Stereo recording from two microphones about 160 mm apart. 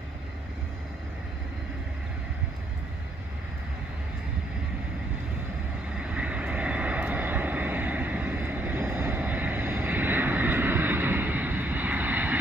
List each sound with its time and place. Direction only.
5.9 s vehicle: 10° right (ahead or behind)